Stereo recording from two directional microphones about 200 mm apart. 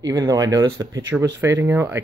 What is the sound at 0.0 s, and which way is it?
Speech, 20° right (ahead or behind).